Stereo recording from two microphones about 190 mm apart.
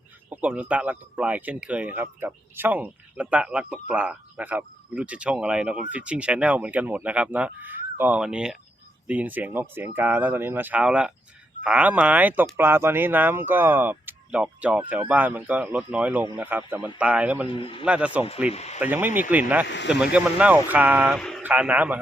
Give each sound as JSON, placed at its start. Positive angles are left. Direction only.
{"t": 0.3, "sound": "speech", "side_deg": -10}
{"t": 17.5, "sound": "a man's voice", "side_deg": 30}
{"t": 17.8, "sound": "speech", "side_deg": -5}
{"t": 18.5, "sound": "speech", "side_deg": 35}
{"t": 18.8, "sound": "speech", "side_deg": -10}
{"t": 19.6, "sound": "speech", "side_deg": 70}
{"t": 20.1, "sound": "speech", "side_deg": -10}
{"t": 21.2, "sound": "a man's voice", "side_deg": 0}